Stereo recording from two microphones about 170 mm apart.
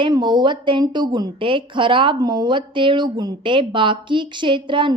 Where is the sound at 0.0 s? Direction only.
25° right (ahead or behind).